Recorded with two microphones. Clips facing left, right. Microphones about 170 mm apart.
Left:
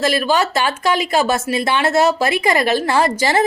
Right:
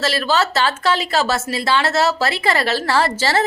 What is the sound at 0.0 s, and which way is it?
A woman's voice, 15° left (ahead or behind).